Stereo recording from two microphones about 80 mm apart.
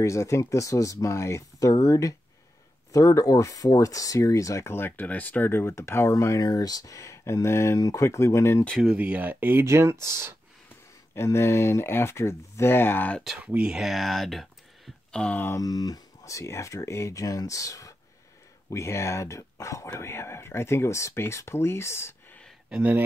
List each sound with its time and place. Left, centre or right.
0.0 s speech: left
8.9 s speech: centre; by 10.3 s right
11.1 s speech: left
13.4 s speech: right
13.7 s speech: centre
15.5 s speech: left
22.7 s speech: right